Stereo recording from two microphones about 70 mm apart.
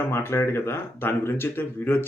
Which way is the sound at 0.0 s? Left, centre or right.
Left.